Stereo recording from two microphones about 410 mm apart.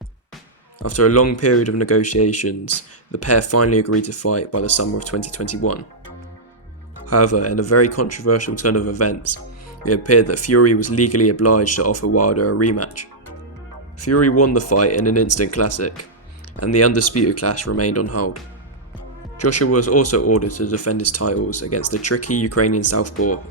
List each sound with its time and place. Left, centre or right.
0.8 s speech: left
7.1 s speech: left
19.4 s speech: left